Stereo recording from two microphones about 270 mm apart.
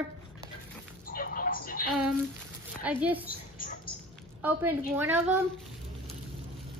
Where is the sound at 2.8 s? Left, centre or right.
Centre.